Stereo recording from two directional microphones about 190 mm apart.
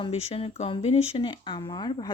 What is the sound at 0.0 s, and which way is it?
Speech, 30° left (ahead or behind).